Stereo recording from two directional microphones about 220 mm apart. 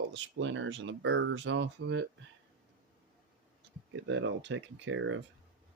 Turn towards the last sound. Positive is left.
turn(degrees=-60)  # may be behind; listen again after turning